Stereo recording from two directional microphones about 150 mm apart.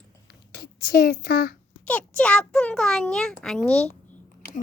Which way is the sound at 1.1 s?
90° left.